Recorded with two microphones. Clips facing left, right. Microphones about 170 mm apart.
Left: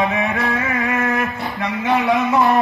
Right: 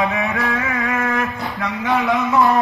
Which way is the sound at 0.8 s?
Centre (ahead or behind).